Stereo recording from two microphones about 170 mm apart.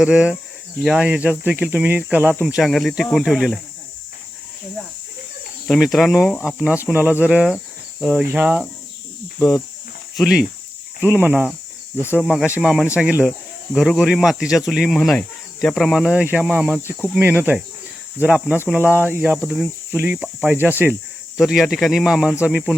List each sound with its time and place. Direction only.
0.0 s speech: 5° right (ahead or behind)
5.6 s speech: centre (ahead or behind)
6.9 s speech: 10° right (ahead or behind)
10.2 s speech: centre (ahead or behind)